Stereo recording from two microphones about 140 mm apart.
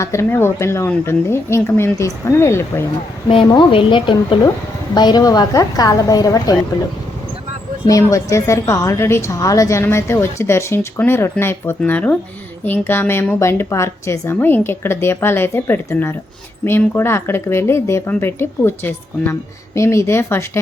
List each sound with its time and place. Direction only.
0.0 s a woman's voice: 20° left (ahead or behind)
3.2 s a woman's voice: 35° left (ahead or behind)
7.9 s a woman's voice: 25° left (ahead or behind)